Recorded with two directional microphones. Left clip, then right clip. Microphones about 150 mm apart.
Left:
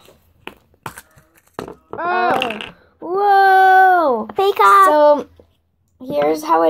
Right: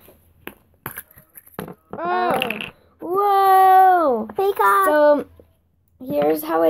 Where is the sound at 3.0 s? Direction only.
5° right (ahead or behind).